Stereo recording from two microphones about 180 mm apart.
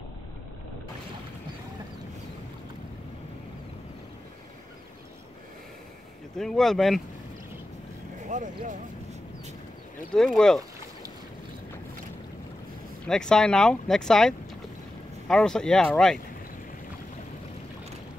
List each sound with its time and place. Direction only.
6.3 s speech: centre (ahead or behind)
8.3 s vehicle: 45° right (ahead or behind)
10.1 s speech: 5° left (ahead or behind)
13.0 s speech: 5° left (ahead or behind)